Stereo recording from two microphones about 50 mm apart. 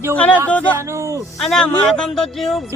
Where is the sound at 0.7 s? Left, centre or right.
Right.